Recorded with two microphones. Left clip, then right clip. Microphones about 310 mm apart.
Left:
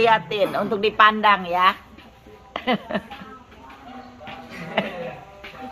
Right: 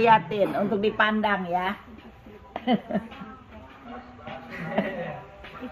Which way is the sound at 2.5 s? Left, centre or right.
Left.